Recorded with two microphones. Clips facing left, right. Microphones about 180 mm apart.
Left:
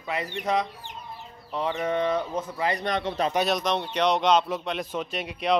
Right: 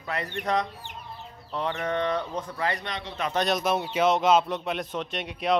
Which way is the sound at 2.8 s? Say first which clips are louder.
Left 8 dB; 50° left (ahead or behind).